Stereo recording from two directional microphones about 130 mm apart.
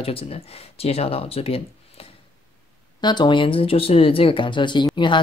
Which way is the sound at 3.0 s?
35° left (ahead or behind).